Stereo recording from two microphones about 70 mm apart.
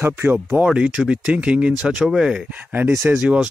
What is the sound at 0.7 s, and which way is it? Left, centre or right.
Speech, centre.